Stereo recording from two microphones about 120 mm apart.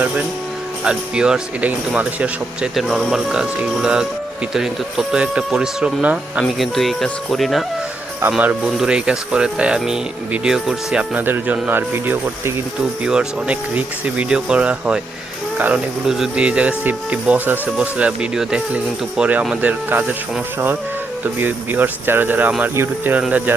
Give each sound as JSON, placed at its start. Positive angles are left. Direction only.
{"t": 0.9, "sound": "speech", "side_deg": -5}
{"t": 6.4, "sound": "speech", "side_deg": 0}
{"t": 21.3, "sound": "speech", "side_deg": -15}